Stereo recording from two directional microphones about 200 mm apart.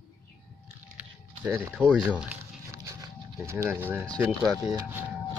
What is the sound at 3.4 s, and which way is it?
Speech, 15° right (ahead or behind).